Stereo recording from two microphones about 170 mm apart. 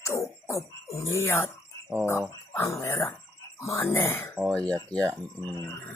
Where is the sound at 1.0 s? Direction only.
15° left (ahead or behind).